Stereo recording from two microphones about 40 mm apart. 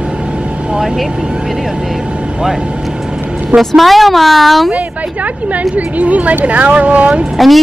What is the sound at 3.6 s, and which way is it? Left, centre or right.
Speech, centre.